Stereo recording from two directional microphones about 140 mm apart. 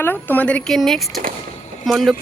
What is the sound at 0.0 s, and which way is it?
Speech, 15° left (ahead or behind).